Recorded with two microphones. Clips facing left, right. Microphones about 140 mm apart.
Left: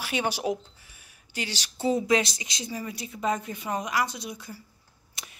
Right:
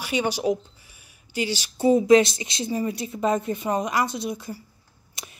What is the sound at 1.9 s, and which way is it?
A woman's voice, 25° right (ahead or behind).